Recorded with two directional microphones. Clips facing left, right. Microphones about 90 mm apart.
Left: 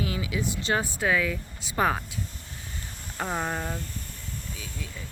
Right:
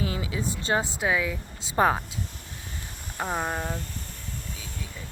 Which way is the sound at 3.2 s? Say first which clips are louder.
Right 1 dB; 10° right (ahead or behind).